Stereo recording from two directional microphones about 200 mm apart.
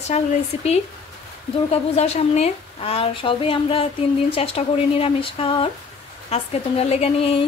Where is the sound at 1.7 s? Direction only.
30° left (ahead or behind).